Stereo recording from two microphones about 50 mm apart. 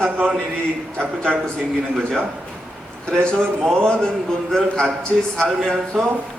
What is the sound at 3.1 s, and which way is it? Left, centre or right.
A man's voice, centre.